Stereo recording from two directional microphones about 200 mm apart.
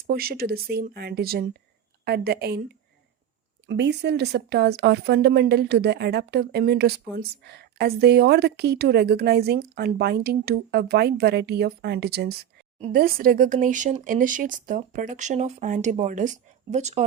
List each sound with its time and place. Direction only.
0.1 s speech: 50° right (ahead or behind)
3.7 s speech: 60° right (ahead or behind); by 17.0 s 35° right (ahead or behind)